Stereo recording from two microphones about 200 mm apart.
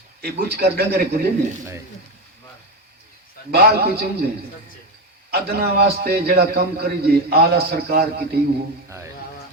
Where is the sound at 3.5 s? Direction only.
50° right (ahead or behind).